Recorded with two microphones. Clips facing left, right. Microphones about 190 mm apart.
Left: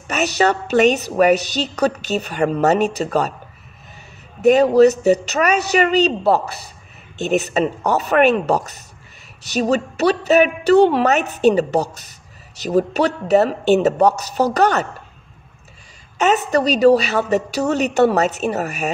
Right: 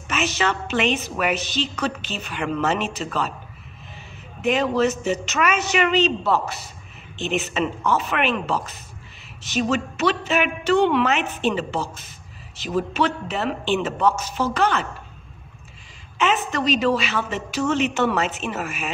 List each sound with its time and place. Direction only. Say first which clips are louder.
0.1 s a woman's voice: left 6 dB; 40° left (ahead or behind)
4.4 s a woman's voice: left 9 dB; 40° left (ahead or behind)
16.2 s a woman's voice: left 6 dB; 40° left (ahead or behind)